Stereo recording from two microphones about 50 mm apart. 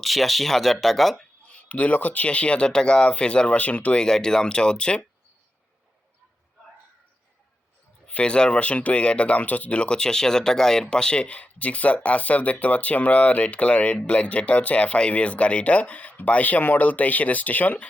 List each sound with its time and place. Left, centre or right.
0.0 s speech: centre
1.5 s speech: left
4.0 s speech: centre
8.0 s speech: left